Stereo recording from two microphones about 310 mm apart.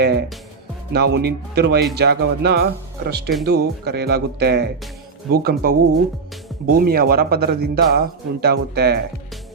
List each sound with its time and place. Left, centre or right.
0.0 s speech: right